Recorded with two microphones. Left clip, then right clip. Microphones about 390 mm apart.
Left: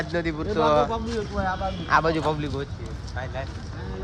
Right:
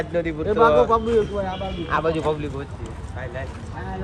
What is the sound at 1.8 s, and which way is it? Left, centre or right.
Speech, left.